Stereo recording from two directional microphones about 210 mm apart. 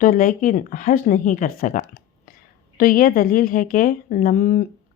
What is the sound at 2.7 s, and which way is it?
A woman's voice, 40° left (ahead or behind).